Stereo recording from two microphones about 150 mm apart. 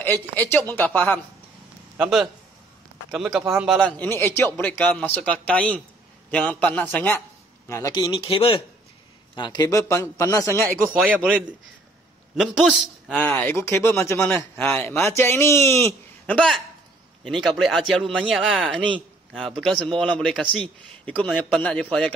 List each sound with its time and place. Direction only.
0.0 s a man's voice: 15° left (ahead or behind)
2.0 s a man's voice: 5° right (ahead or behind); by 10.9 s 15° left (ahead or behind)
10.9 s a man's voice: 10° right (ahead or behind)
13.2 s a man's voice: 15° left (ahead or behind)
16.3 s a man's voice: centre (ahead or behind)